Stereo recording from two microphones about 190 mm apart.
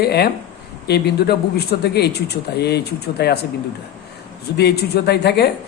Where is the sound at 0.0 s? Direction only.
60° left (ahead or behind).